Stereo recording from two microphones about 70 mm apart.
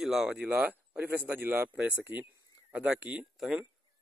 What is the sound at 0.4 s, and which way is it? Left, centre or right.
Speech, right.